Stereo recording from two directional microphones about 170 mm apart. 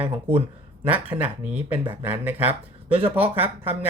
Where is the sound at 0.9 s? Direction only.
10° right (ahead or behind).